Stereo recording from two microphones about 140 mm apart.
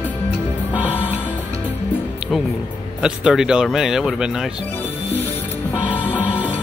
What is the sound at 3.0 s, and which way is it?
Speech, 5° right (ahead or behind).